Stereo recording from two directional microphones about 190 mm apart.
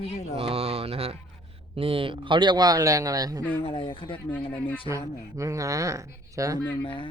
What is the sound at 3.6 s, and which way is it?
Speech, 30° left (ahead or behind).